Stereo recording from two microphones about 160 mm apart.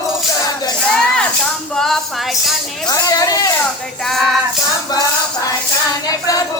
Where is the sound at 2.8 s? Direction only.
20° left (ahead or behind).